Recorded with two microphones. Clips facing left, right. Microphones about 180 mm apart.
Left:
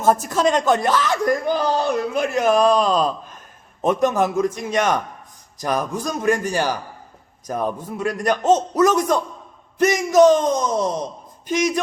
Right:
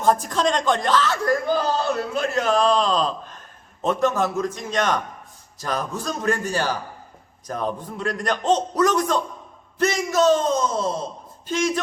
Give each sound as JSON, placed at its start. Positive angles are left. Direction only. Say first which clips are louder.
{"t": 0.0, "sound": "a man's voice", "louder": "left 2 dB", "side_deg": 5}